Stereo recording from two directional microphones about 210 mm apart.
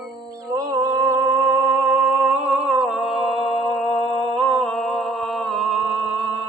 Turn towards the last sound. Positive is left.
turn(degrees=-5)  # may be behind; listen again after turning